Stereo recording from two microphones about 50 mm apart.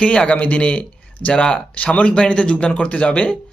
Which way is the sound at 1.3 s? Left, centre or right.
Centre.